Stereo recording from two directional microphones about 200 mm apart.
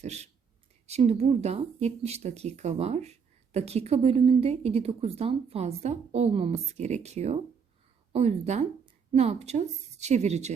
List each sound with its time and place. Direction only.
0.0 s speech: 35° right (ahead or behind)